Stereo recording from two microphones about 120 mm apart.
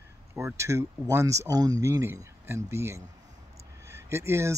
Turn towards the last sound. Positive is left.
turn(degrees=-20)  # may be behind; listen again after turning